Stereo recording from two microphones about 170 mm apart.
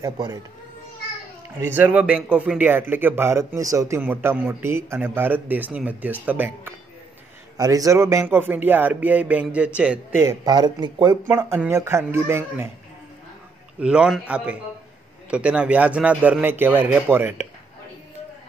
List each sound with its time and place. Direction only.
0.0 s a child's voice: 20° right (ahead or behind)
1.6 s a man's voice: 10° right (ahead or behind)
7.5 s a man's voice: 20° right (ahead or behind)
10.4 s a man's voice: 25° right (ahead or behind)
13.7 s a man's voice: 5° right (ahead or behind)